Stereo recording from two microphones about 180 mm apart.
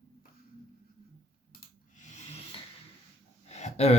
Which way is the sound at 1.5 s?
40° left (ahead or behind).